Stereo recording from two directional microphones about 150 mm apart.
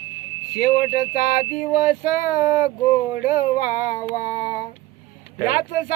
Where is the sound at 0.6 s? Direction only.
85° left.